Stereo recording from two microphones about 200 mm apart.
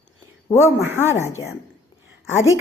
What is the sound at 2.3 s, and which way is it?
Speech, 80° left.